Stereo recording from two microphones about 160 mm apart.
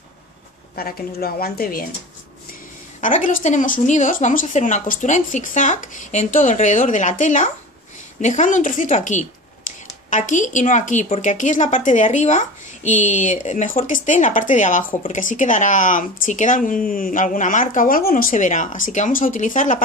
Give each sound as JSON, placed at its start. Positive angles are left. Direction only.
{"t": 0.7, "sound": "a woman's voice", "side_deg": 65}
{"t": 3.0, "sound": "a woman's voice", "side_deg": 55}
{"t": 9.7, "sound": "a sound", "side_deg": 55}
{"t": 10.0, "sound": "a woman's voice", "side_deg": 50}